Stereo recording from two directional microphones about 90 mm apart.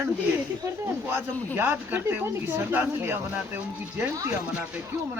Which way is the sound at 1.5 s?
20° right (ahead or behind).